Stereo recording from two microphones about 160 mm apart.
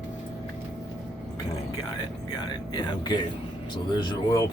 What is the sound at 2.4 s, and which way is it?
Speech, 25° left (ahead or behind).